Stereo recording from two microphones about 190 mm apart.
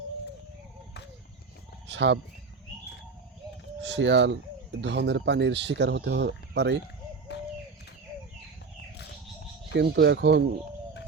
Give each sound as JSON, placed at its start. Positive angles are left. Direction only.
{"t": 1.9, "sound": "speech", "side_deg": -65}
{"t": 3.8, "sound": "speech", "side_deg": -70}
{"t": 7.3, "sound": "bird", "side_deg": 65}
{"t": 9.7, "sound": "speech", "side_deg": -60}